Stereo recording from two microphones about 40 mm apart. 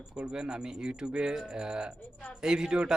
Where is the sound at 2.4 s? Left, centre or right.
Centre.